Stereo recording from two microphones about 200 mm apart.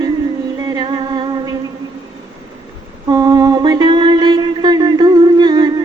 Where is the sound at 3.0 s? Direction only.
20° right (ahead or behind).